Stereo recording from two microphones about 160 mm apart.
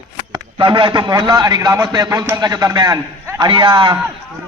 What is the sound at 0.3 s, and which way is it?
A man's voice, 30° right (ahead or behind).